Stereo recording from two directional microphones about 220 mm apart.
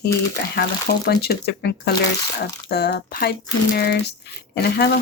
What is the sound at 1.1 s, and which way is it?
Speech, 45° left (ahead or behind).